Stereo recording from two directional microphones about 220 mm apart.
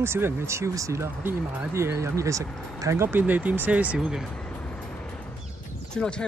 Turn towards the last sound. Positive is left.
turn(degrees=5)  # may be behind; listen again after turning